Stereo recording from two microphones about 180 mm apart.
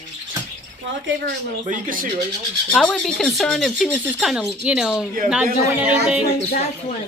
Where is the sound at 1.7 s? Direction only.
50° right (ahead or behind).